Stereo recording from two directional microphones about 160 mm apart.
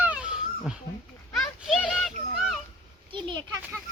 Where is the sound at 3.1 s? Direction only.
30° right (ahead or behind).